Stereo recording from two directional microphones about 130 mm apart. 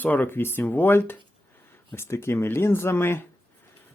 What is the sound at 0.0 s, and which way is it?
Speech, 15° left (ahead or behind).